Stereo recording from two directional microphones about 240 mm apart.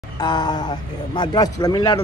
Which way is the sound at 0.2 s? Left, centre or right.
Centre.